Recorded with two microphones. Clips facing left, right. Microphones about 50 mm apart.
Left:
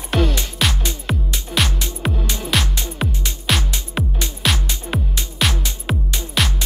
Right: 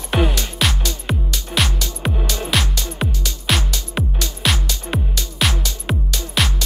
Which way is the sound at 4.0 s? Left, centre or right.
Centre.